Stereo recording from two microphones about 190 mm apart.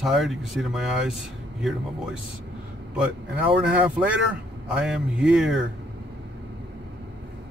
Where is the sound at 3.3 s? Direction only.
10° right (ahead or behind).